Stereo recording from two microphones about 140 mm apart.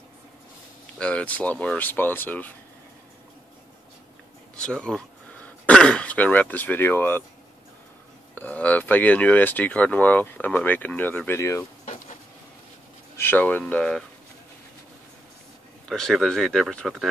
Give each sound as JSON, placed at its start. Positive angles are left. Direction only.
{"t": 0.9, "sound": "speech", "side_deg": 10}
{"t": 4.6, "sound": "speech", "side_deg": 5}
{"t": 8.4, "sound": "speech", "side_deg": 10}
{"t": 11.8, "sound": "a sound", "side_deg": 60}
{"t": 13.2, "sound": "speech", "side_deg": 15}
{"t": 15.9, "sound": "speech", "side_deg": 5}